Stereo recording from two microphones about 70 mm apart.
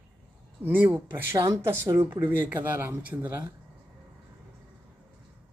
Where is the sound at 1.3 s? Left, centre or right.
Right.